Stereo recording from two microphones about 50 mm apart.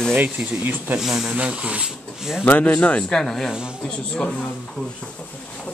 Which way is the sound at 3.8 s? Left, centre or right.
Centre.